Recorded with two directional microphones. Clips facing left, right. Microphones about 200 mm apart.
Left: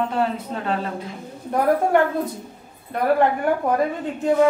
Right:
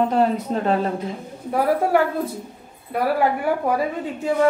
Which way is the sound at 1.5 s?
5° right (ahead or behind).